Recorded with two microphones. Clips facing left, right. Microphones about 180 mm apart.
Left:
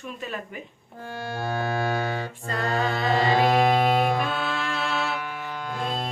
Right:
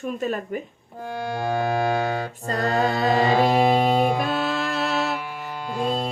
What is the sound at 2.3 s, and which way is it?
A capella, 40° right (ahead or behind).